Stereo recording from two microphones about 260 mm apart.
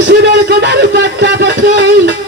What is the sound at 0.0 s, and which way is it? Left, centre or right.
A man's voice, right.